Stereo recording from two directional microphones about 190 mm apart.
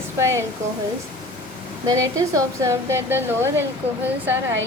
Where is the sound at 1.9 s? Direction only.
15° right (ahead or behind).